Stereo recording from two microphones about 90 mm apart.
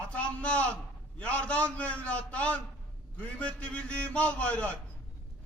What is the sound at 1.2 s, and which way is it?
A man's voice, 15° left (ahead or behind).